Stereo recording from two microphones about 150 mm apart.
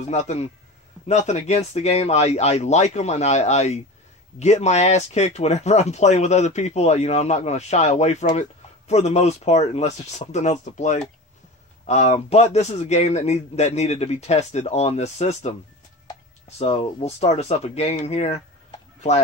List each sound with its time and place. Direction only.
0.1 s speech: 45° left (ahead or behind)